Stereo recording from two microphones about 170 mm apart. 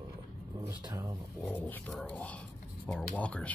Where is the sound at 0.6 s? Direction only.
20° right (ahead or behind).